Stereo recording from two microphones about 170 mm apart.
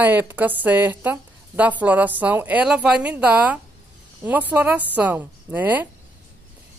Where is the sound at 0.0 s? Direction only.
10° right (ahead or behind).